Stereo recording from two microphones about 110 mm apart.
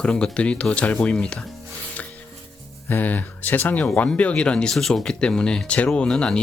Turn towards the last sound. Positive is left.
turn(degrees=10)  # may be behind; listen again after turning